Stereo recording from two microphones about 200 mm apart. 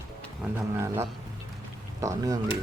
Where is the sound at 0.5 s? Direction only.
10° right (ahead or behind).